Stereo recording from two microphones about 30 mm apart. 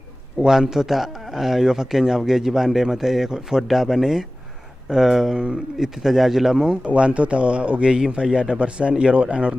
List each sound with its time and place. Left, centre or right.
0.4 s speech: right
0.7 s speech: centre
3.2 s speech: right
3.7 s speech: centre
6.8 s speech: right
7.9 s speech: right